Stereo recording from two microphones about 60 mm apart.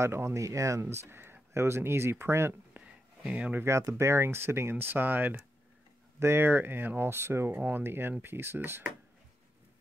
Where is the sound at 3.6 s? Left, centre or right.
Right.